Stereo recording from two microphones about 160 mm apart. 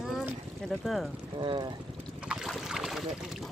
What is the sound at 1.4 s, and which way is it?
Speech, 30° right (ahead or behind).